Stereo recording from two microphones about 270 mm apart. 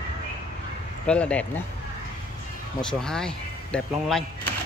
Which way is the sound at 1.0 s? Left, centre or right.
Centre.